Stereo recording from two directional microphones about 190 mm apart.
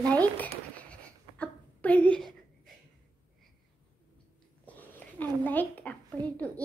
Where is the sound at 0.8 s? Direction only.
5° left (ahead or behind).